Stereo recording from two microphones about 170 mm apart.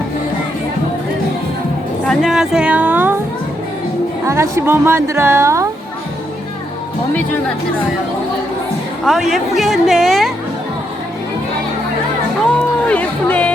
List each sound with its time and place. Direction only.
2.0 s a sound: centre (ahead or behind)
4.3 s a woman's voice: 15° right (ahead or behind)
9.0 s a woman's voice: centre (ahead or behind)
12.5 s music: 10° left (ahead or behind)